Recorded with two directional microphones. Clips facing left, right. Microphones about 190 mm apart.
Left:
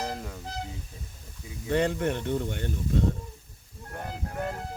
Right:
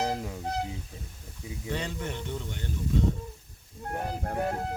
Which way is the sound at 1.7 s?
60° left (ahead or behind).